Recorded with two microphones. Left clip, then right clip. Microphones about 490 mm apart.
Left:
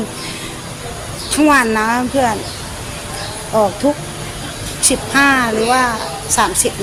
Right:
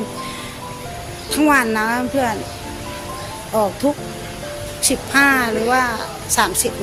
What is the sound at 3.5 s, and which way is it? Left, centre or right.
Speech, right.